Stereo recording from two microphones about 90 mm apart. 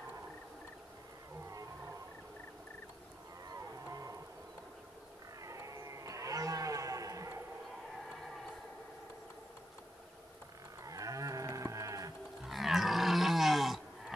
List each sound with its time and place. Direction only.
3.9 s insect: 40° right (ahead or behind)
5.4 s a sound: 35° right (ahead or behind)
10.8 s moo: 40° right (ahead or behind)
12.4 s livestock: centre (ahead or behind)